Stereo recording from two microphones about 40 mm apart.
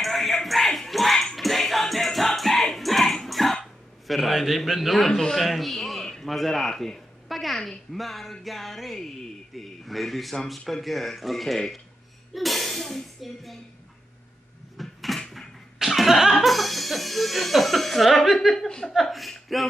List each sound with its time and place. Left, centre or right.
0.0 s music: centre
3.3 s cough: centre
4.1 s speech: centre
6.7 s a woman's voice: centre
7.2 s a sound: centre
7.9 s speech: centre
14.8 s a sound: centre
16.3 s speech: centre
18.7 s a woman's voice: centre
18.9 s speech: centre